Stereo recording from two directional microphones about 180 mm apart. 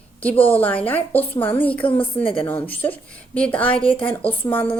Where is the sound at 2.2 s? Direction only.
30° left (ahead or behind).